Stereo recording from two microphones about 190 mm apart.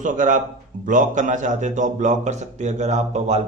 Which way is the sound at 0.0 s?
40° right (ahead or behind).